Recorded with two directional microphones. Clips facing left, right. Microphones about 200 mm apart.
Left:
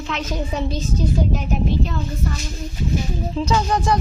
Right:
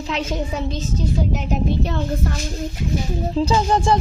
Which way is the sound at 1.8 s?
60° right (ahead or behind).